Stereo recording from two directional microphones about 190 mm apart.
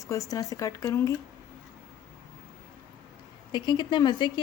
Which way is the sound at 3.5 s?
25° left (ahead or behind).